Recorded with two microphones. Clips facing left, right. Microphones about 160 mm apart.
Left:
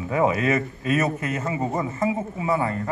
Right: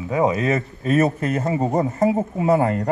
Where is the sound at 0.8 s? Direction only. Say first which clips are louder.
Right 7 dB; 35° right (ahead or behind).